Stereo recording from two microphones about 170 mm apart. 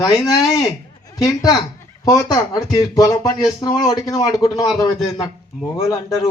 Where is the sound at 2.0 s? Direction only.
20° left (ahead or behind).